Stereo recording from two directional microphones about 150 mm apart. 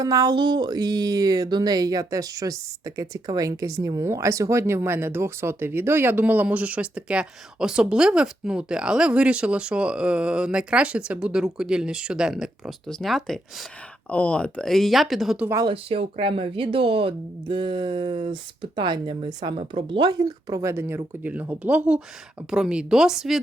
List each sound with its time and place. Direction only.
0.0 s speech: 25° right (ahead or behind); by 15.4 s centre (ahead or behind)
15.4 s speech: 20° right (ahead or behind)
15.7 s speech: 40° right (ahead or behind); by 23.4 s 5° right (ahead or behind)